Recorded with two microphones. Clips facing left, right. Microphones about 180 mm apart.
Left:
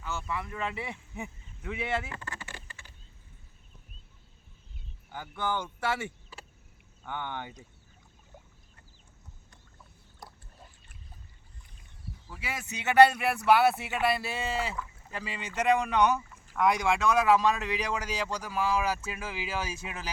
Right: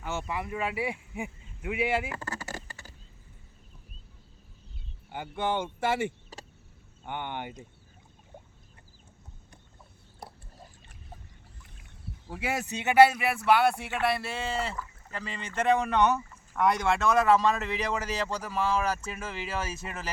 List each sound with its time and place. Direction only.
0.4 s speech: 10° right (ahead or behind)
2.1 s a sound: 40° right (ahead or behind)
5.0 s speech: 25° right (ahead or behind)
6.3 s cricket: 40° right (ahead or behind)
7.0 s speech: 20° right (ahead or behind)
12.3 s speech: 50° right (ahead or behind)
12.7 s speech: 15° right (ahead or behind)
13.0 s speech: centre (ahead or behind)